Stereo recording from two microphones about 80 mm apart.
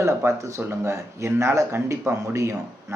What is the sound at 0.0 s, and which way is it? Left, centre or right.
Speech, right.